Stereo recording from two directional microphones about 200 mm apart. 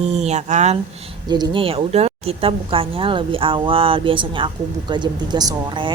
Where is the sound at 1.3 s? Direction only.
20° right (ahead or behind).